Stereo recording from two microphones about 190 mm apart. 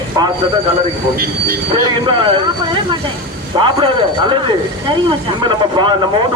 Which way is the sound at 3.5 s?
25° right (ahead or behind).